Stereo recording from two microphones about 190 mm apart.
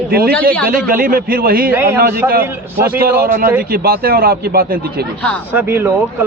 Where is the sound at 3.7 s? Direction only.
55° right (ahead or behind).